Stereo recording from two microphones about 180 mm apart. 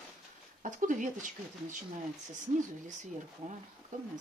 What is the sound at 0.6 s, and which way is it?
Speech, 45° right (ahead or behind).